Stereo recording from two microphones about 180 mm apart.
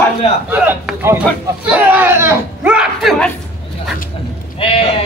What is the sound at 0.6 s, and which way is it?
Speech, 10° right (ahead or behind).